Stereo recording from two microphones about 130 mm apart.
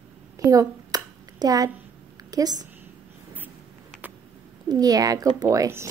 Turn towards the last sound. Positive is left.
turn(degrees=-20)  # may be behind; listen again after turning